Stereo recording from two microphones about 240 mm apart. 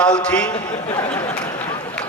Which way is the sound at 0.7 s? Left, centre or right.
Left.